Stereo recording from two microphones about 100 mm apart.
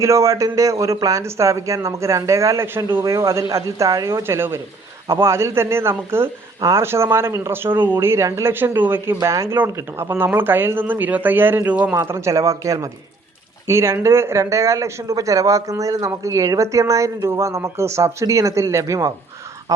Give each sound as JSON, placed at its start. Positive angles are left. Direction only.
{"t": 0.0, "sound": "speech", "side_deg": -30}
{"t": 6.6, "sound": "speech", "side_deg": -35}
{"t": 6.8, "sound": "speech", "side_deg": -25}
{"t": 12.1, "sound": "speech", "side_deg": -30}